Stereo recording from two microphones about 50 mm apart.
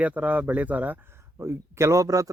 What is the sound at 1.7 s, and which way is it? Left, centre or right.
Speech, right.